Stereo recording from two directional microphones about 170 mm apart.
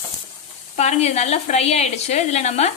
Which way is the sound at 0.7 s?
40° left (ahead or behind).